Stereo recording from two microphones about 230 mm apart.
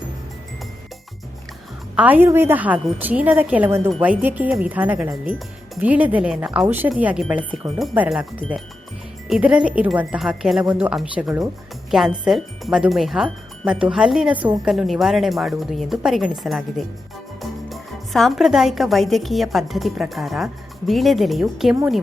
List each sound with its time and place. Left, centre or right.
2.0 s a woman's voice: centre